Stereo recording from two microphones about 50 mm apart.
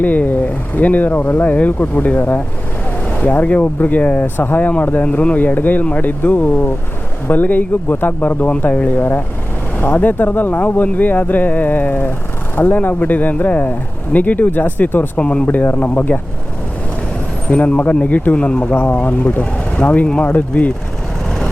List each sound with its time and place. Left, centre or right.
0.0 s speech: left
5.0 s speech: left
15.2 s speech: centre
15.4 s speech: left
17.5 s speech: left
19.4 s speech: left